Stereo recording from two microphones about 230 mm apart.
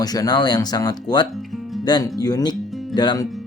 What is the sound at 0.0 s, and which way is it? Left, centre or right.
Speech, centre.